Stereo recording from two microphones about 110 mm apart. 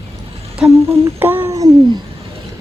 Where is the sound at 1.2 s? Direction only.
15° right (ahead or behind).